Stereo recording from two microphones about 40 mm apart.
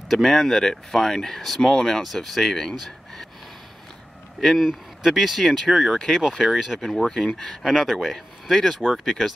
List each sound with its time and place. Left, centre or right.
0.1 s speech: centre
2.7 s a sound: centre
4.4 s speech: centre
7.1 s speech: centre
7.6 s speech: centre